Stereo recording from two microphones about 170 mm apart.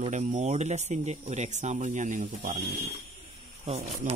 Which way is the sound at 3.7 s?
35° right (ahead or behind).